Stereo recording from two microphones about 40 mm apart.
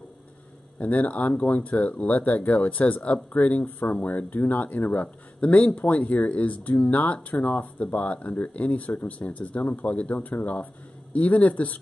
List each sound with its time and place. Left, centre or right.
0.7 s speech: left
10.1 s speech: left